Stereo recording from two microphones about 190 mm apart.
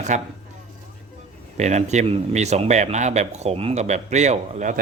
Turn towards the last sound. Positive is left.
turn(degrees=-40)  # may be behind; listen again after turning